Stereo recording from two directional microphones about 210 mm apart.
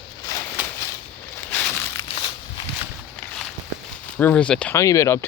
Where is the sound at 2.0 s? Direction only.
25° left (ahead or behind).